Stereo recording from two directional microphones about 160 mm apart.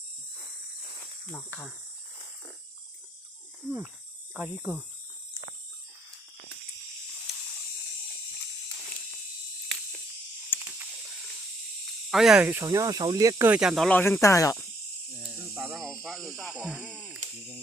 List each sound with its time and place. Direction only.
1.3 s speech: 10° left (ahead or behind)
4.4 s speech: 10° right (ahead or behind)
7.3 s spray: centre (ahead or behind)
10.5 s a sound: 10° left (ahead or behind)
12.1 s speech: 5° right (ahead or behind)
12.6 s speech: 20° right (ahead or behind)
13.5 s speech: 5° right (ahead or behind); by 14.6 s 20° left (ahead or behind)
15.5 s snake: 15° right (ahead or behind)
15.8 s speech: centre (ahead or behind)